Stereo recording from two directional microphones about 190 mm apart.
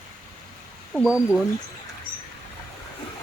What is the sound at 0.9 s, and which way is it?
Speech, 5° right (ahead or behind).